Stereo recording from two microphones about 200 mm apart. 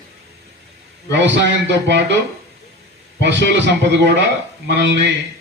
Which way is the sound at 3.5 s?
60° right (ahead or behind).